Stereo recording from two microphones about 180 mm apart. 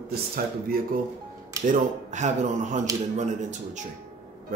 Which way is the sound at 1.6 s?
40° right (ahead or behind).